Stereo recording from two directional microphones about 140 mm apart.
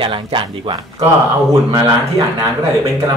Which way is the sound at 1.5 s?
25° right (ahead or behind).